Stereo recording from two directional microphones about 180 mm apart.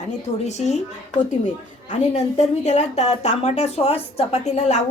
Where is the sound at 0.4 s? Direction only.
40° left (ahead or behind).